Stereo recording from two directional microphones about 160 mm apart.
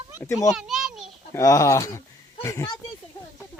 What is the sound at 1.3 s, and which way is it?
Speech, 20° left (ahead or behind).